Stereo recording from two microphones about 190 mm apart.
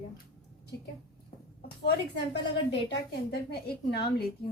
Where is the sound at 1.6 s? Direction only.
60° left (ahead or behind).